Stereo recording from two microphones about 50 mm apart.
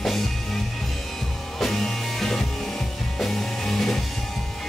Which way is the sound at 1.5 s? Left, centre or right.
Centre.